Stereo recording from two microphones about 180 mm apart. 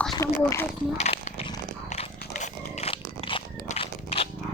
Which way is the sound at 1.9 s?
40° left (ahead or behind).